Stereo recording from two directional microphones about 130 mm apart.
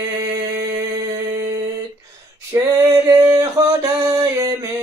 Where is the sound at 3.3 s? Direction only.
25° right (ahead or behind).